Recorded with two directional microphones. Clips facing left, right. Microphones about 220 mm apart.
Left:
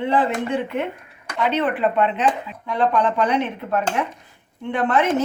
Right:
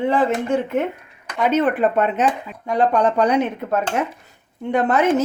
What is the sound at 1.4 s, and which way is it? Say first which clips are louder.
Speech: right 3 dB; 45° right (ahead or behind).